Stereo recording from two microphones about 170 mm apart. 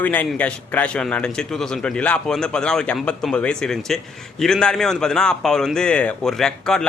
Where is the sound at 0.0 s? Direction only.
10° left (ahead or behind).